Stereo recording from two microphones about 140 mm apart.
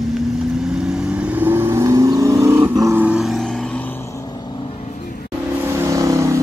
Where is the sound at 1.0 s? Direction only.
10° right (ahead or behind).